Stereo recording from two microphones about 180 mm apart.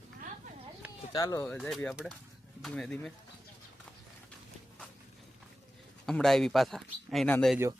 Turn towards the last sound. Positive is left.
turn(degrees=5)  # may be behind; listen again after turning